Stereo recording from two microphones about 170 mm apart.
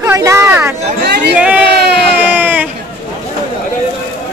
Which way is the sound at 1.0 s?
75° right (ahead or behind).